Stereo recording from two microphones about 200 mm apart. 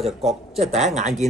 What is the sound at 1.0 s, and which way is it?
Speech, 35° right (ahead or behind).